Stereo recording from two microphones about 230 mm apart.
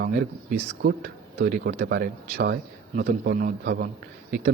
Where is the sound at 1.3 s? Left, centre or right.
Right.